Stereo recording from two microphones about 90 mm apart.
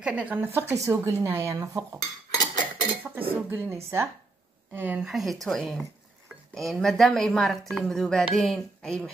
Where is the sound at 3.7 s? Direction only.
30° right (ahead or behind).